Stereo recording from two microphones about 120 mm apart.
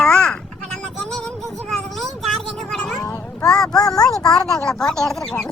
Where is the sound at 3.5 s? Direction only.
5° left (ahead or behind).